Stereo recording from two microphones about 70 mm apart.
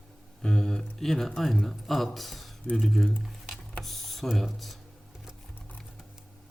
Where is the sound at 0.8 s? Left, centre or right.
Centre.